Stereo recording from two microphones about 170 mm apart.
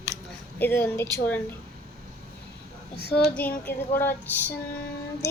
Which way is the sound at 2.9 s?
65° left (ahead or behind).